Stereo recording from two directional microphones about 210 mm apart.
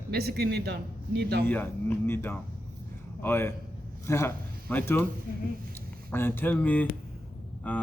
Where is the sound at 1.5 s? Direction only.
10° left (ahead or behind).